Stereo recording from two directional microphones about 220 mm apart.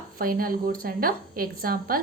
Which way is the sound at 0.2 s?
40° right (ahead or behind).